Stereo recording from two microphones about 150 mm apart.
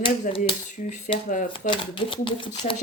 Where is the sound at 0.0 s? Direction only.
35° left (ahead or behind).